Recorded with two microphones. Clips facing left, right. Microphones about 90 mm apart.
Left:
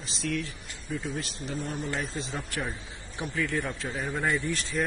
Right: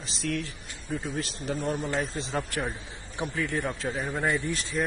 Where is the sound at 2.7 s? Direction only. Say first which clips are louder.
Right 2 dB; 25° right (ahead or behind).